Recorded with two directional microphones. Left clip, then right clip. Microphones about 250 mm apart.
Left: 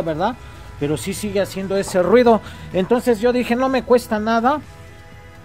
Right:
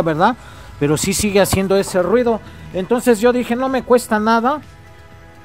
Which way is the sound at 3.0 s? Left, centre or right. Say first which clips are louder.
Right 3 dB; centre.